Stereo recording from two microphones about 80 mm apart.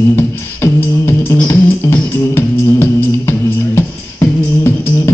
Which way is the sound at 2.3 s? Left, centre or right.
Left.